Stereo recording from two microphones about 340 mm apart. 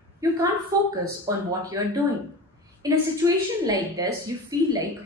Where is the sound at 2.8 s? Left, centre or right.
Centre.